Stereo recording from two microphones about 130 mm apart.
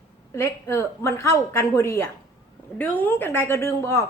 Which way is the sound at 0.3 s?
20° left (ahead or behind).